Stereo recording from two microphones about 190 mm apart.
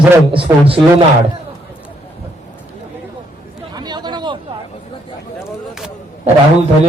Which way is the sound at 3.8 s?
20° right (ahead or behind).